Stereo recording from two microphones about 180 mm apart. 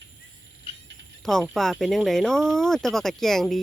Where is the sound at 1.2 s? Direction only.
Centre (ahead or behind).